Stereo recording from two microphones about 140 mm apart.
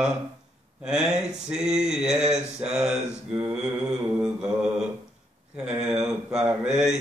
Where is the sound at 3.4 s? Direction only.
5° right (ahead or behind).